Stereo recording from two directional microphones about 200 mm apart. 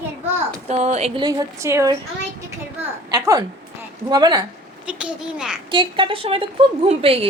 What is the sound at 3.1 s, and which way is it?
A woman's voice, 20° right (ahead or behind).